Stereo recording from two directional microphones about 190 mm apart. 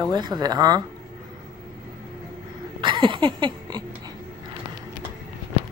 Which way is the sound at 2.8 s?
25° right (ahead or behind).